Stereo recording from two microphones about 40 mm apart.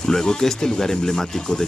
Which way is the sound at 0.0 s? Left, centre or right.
Centre.